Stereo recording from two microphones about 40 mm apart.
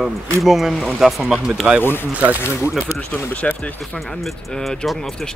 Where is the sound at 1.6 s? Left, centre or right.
Right.